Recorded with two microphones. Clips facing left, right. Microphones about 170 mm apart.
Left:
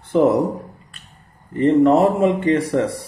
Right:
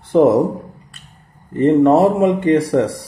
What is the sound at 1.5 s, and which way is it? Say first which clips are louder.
Speech: right 2 dB; 20° right (ahead or behind).